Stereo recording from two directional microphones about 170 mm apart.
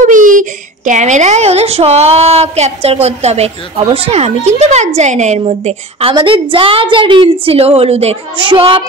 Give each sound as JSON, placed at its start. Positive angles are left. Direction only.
{"t": 0.0, "sound": "a woman's voice", "side_deg": -50}